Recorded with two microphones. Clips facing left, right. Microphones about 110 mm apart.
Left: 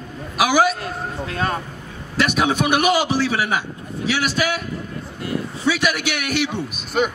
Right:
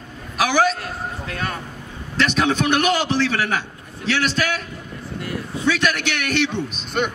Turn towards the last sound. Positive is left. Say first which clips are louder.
# left 2 dB
turn(degrees=5)  # may be behind; listen again after turning